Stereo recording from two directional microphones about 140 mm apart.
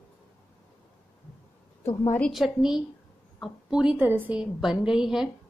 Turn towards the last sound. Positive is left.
turn(degrees=-5)  # may be behind; listen again after turning